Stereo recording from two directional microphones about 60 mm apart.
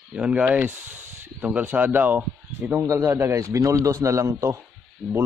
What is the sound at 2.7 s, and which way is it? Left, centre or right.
A man's voice, right.